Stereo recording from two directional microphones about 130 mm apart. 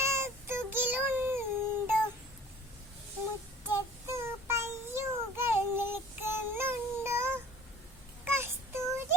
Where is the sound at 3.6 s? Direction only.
20° right (ahead or behind).